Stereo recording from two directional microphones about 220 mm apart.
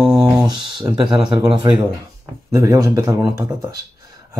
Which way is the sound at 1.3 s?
20° right (ahead or behind).